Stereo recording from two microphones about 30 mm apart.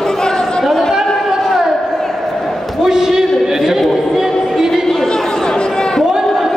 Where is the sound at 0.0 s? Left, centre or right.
Left.